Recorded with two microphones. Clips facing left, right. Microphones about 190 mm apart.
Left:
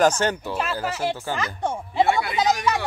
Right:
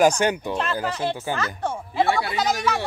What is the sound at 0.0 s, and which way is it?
Speech, 15° right (ahead or behind).